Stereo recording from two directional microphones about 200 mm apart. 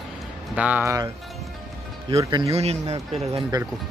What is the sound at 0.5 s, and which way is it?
Speech, 5° right (ahead or behind).